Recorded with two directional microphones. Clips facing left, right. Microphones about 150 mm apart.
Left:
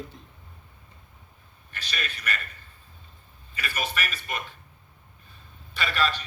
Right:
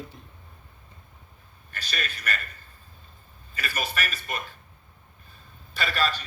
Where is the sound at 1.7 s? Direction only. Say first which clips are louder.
Right 1 dB; 40° right (ahead or behind).